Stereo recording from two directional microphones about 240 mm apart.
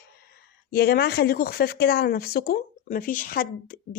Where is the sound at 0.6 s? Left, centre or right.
Left.